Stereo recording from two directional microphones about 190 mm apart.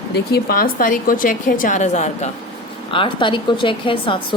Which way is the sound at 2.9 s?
25° left (ahead or behind).